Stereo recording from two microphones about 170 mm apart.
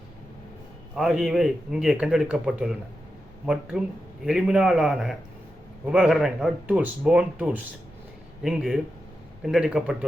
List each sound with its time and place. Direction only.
0.9 s speech: centre (ahead or behind)